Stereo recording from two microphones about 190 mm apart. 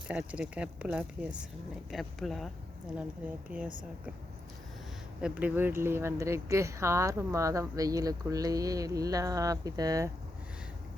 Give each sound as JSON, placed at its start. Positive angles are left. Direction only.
{"t": 0.1, "sound": "speech", "side_deg": -5}
{"t": 3.5, "sound": "speech", "side_deg": -10}
{"t": 5.2, "sound": "speech", "side_deg": -10}